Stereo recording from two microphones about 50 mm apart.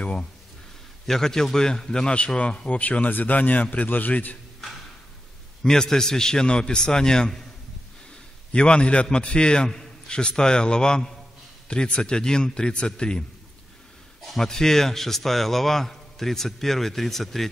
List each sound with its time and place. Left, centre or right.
0.0 s speech: left
1.0 s a man's voice: centre
2.7 s speech: left
5.6 s a man's voice: centre
8.5 s a man's voice: left
14.2 s a man's voice: centre